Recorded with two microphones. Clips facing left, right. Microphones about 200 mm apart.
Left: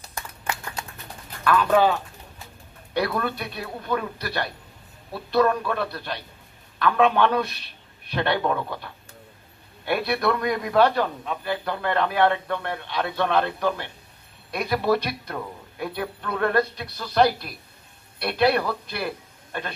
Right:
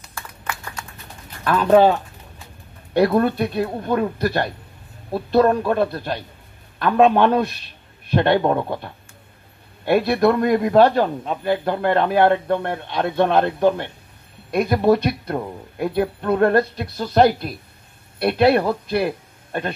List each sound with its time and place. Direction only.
0.1 s clapping: 20° left (ahead or behind)
1.4 s speech: 40° right (ahead or behind)
3.1 s a man's voice: 40° right (ahead or behind)
14.5 s a man's voice: 50° right (ahead or behind)
16.7 s a man's voice: 50° right (ahead or behind)